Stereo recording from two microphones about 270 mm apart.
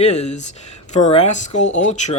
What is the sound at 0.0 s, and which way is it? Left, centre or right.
Speech, left.